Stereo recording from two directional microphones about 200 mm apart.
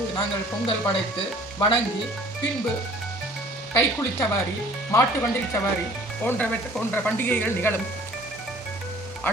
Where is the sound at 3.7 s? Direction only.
15° left (ahead or behind).